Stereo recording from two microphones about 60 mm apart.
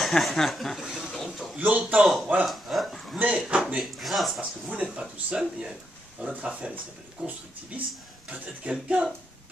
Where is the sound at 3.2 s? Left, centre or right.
Right.